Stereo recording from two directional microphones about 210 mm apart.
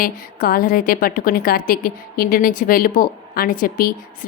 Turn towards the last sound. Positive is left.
turn(degrees=45)  # may be behind; listen again after turning